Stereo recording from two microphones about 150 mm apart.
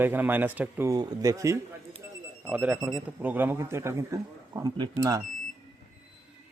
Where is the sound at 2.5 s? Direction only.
10° right (ahead or behind); by 5.2 s 25° right (ahead or behind).